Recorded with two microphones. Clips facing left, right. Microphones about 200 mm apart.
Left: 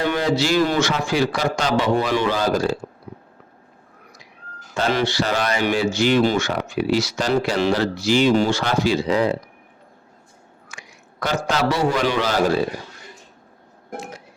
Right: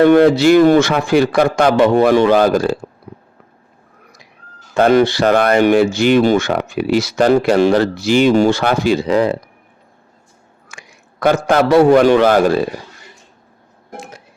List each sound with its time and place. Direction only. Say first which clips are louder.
0.0 s speech: right 12 dB; 55° right (ahead or behind)
4.7 s speech: right 10 dB; 55° right (ahead or behind)
10.7 s a man's voice: right 3 dB; 55° right (ahead or behind)